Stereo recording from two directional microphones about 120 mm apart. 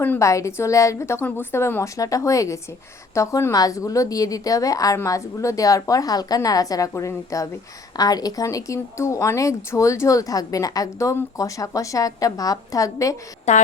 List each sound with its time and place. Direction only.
0.2 s speech: 25° left (ahead or behind)
13.5 s a woman's voice: 70° left (ahead or behind)